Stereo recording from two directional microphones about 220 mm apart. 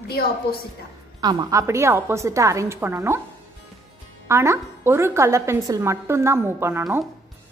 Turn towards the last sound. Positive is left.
turn(degrees=-15)  # may be behind; listen again after turning